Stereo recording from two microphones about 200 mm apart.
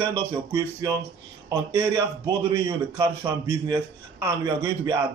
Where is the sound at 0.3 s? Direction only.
15° right (ahead or behind).